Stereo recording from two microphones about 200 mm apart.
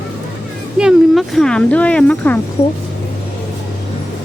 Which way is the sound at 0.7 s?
Centre (ahead or behind).